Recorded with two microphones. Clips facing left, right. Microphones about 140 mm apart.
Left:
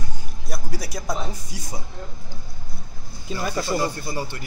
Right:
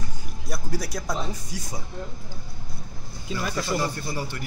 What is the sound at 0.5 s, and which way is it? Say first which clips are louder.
Speech: right 1 dB; 5° left (ahead or behind).